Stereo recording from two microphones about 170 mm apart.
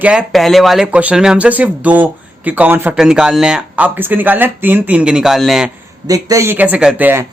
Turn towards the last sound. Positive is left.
turn(degrees=-10)  # may be behind; listen again after turning